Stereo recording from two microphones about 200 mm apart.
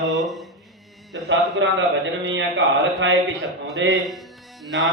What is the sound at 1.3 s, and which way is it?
Speech, 65° right (ahead or behind).